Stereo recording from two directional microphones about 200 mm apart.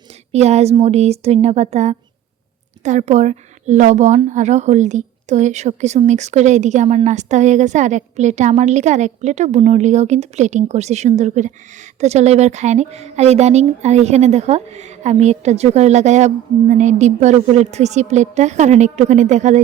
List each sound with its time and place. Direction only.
0.3 s a woman's voice: 35° right (ahead or behind)